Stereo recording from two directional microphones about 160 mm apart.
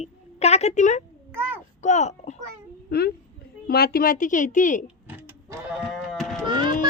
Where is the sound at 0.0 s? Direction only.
40° left (ahead or behind).